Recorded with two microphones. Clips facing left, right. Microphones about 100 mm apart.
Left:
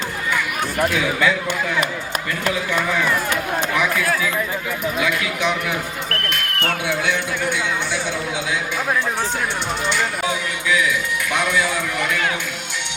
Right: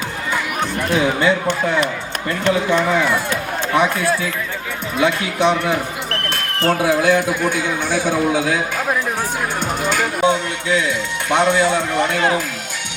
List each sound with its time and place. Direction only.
0.9 s speech: 30° right (ahead or behind)
3.8 s speech: 30° right (ahead or behind); by 8.8 s 45° right (ahead or behind)
9.8 s speech: 45° right (ahead or behind)
10.2 s speech: 30° right (ahead or behind)